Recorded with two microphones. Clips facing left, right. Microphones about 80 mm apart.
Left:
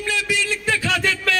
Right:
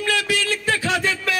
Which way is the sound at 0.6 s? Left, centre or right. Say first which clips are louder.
Left 1 dB; right.